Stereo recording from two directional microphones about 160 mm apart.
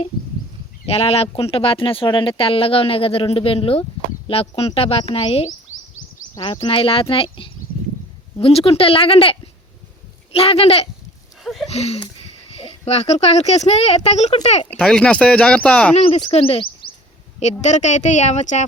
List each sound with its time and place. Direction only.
0.9 s speech: 40° left (ahead or behind)
11.4 s a sound: centre (ahead or behind)
11.7 s speech: 40° left (ahead or behind)
14.7 s speech: 5° left (ahead or behind)
16.0 s speech: 45° left (ahead or behind)
17.4 s speech: 45° left (ahead or behind)